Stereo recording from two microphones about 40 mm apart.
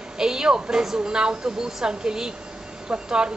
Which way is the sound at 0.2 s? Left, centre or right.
Centre.